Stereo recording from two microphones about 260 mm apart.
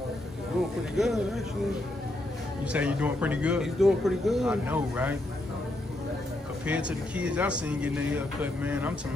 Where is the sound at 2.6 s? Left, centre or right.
Centre.